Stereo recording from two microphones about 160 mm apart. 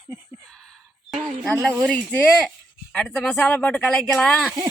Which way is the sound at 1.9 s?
5° left (ahead or behind).